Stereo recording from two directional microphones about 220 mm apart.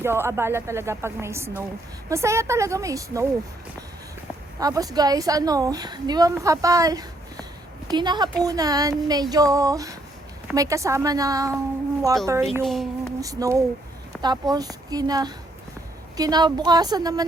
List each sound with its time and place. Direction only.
0.0 s a woman's voice: 10° right (ahead or behind)
4.6 s a woman's voice: 15° right (ahead or behind)
12.6 s speech: centre (ahead or behind)
13.1 s a sound: 15° right (ahead or behind)
14.1 s a woman's voice: 20° right (ahead or behind)